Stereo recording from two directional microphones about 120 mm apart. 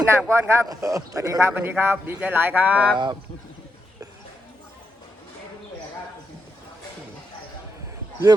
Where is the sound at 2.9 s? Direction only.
40° right (ahead or behind).